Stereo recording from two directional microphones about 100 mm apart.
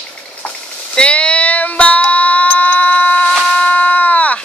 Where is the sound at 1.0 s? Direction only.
10° left (ahead or behind).